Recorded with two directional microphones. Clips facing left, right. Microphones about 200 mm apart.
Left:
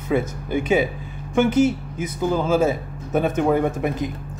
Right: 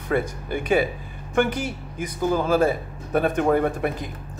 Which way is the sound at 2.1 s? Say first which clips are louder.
Left 1 dB; 15° left (ahead or behind).